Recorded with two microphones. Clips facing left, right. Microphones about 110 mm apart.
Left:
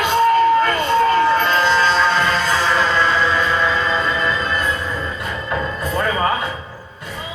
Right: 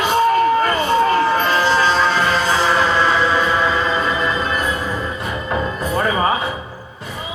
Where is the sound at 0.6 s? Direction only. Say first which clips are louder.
Even; 10° right (ahead or behind).